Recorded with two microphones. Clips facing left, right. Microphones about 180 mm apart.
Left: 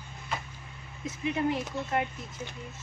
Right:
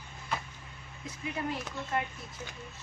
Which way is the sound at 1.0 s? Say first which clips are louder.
Left 7 dB; 20° left (ahead or behind).